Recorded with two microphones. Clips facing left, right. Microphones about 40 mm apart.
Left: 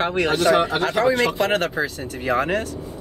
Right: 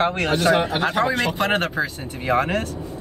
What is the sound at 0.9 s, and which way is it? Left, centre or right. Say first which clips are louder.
Speech: left 5 dB; right.